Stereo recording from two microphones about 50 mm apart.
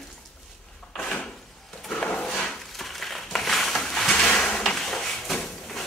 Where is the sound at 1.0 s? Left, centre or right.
Centre.